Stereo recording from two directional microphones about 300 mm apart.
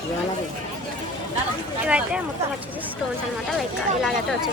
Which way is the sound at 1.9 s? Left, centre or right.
Centre.